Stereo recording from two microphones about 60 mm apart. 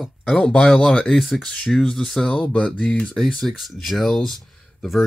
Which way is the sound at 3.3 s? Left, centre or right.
Centre.